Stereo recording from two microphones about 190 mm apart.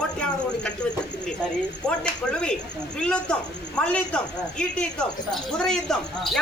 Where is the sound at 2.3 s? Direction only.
5° left (ahead or behind).